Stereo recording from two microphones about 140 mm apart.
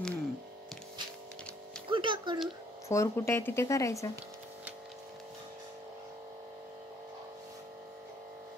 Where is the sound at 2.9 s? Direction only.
20° left (ahead or behind).